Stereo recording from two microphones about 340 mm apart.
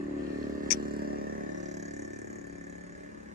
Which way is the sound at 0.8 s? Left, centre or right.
Right.